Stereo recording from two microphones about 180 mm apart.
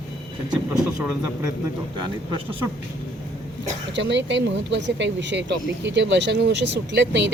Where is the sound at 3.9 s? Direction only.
80° right.